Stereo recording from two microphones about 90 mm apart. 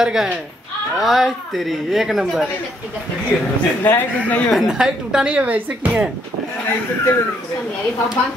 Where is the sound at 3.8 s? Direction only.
20° left (ahead or behind).